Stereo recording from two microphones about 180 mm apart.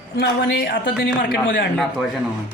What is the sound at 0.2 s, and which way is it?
A woman's voice, 70° left (ahead or behind).